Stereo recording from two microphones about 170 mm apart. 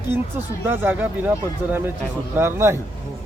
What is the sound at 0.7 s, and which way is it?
Speech, 10° right (ahead or behind).